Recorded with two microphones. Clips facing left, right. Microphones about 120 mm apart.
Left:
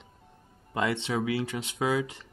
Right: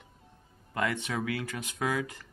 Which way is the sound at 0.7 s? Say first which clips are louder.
Left 3 dB; 25° left (ahead or behind).